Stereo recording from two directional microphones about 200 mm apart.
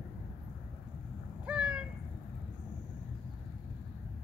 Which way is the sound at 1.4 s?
5° right (ahead or behind).